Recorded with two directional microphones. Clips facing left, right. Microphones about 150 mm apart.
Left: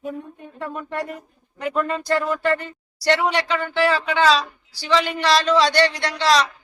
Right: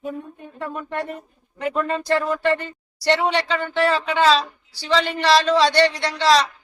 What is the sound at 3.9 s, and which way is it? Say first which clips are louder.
Speech: right 1 dB; 30° right (ahead or behind).